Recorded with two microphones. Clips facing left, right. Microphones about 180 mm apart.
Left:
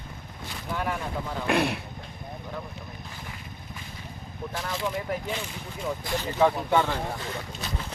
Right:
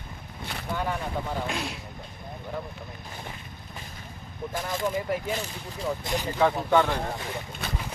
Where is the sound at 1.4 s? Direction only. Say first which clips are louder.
Left 7 dB; 60° left (ahead or behind).